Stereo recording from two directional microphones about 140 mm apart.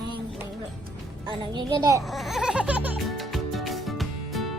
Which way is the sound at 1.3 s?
30° right (ahead or behind).